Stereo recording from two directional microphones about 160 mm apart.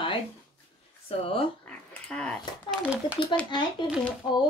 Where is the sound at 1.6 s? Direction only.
10° left (ahead or behind).